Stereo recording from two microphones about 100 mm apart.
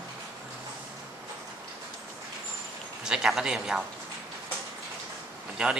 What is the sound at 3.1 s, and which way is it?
Speech, 5° right (ahead or behind).